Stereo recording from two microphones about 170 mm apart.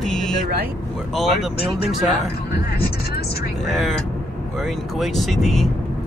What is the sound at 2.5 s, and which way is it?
Speech, 65° left (ahead or behind).